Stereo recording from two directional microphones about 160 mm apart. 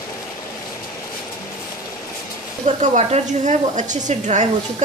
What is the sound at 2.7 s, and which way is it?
A woman's voice, 50° right (ahead or behind).